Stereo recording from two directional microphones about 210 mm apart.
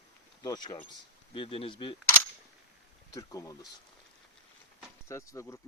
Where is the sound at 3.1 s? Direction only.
15° left (ahead or behind).